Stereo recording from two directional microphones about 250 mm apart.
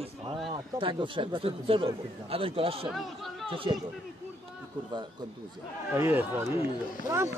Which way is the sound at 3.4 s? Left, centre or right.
Right.